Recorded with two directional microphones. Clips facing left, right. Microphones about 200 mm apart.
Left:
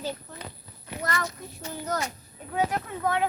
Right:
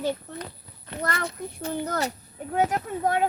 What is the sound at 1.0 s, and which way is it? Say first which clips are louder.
Speech: right 2 dB; 55° right (ahead or behind).